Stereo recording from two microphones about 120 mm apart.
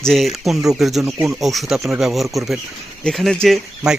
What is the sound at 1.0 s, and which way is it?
Speech, 20° right (ahead or behind).